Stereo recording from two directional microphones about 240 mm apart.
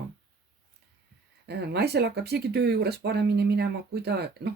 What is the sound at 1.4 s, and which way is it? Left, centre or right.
Speech, right.